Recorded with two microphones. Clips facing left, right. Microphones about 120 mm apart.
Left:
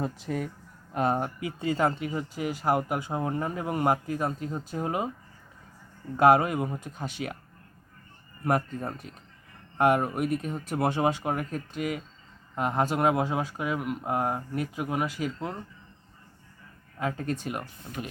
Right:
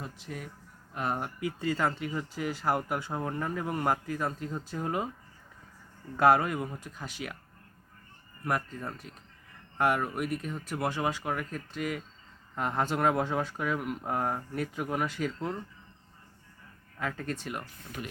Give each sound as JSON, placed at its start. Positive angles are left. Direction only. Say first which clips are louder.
{"t": 0.0, "sound": "speech", "louder": "left 10 dB", "side_deg": 40}
{"t": 0.9, "sound": "speech", "louder": "left 6 dB", "side_deg": 30}
{"t": 6.1, "sound": "speech", "louder": "left 3 dB", "side_deg": 20}
{"t": 8.4, "sound": "speech", "louder": "left 5 dB", "side_deg": 25}
{"t": 17.0, "sound": "speech", "louder": "left 4 dB", "side_deg": 20}